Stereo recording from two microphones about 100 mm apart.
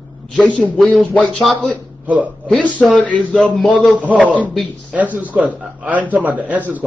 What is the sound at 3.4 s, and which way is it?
Speech, centre (ahead or behind).